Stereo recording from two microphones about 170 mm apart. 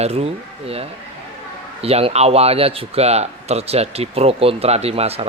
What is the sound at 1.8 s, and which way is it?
A man's voice, 35° right (ahead or behind).